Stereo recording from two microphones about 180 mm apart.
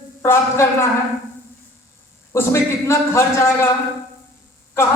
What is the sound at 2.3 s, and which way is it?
A man's voice, 15° left (ahead or behind).